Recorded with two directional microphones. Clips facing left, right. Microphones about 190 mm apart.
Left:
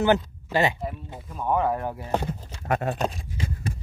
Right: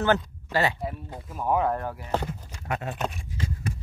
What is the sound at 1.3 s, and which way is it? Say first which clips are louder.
Speech: even; 5° right (ahead or behind).